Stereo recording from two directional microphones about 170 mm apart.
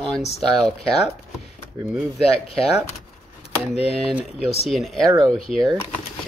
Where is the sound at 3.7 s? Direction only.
35° left (ahead or behind).